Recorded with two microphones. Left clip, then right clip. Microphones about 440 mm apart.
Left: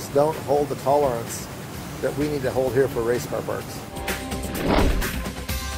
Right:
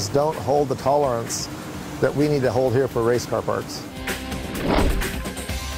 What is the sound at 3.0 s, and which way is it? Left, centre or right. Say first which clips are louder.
Speech: right 3 dB; right.